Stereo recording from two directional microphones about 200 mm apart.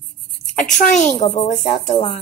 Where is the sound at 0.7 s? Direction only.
40° left (ahead or behind).